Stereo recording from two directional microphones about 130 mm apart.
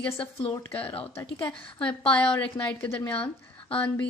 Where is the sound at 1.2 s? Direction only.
40° left (ahead or behind).